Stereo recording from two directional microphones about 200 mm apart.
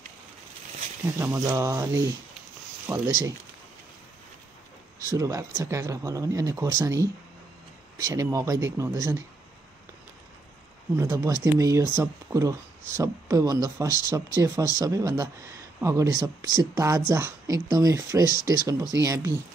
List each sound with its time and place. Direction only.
1.1 s speech: 15° right (ahead or behind)
5.0 s speech: 15° right (ahead or behind)
11.0 s speech: 15° right (ahead or behind)
18.3 s speech: 45° left (ahead or behind)
18.9 s speech: 15° right (ahead or behind)